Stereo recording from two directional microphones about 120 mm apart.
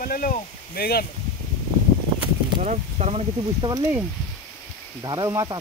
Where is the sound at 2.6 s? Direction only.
80° right.